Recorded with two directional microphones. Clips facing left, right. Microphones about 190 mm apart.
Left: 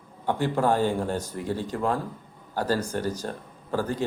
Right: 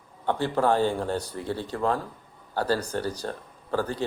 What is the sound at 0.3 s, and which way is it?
A man's voice, 15° left (ahead or behind).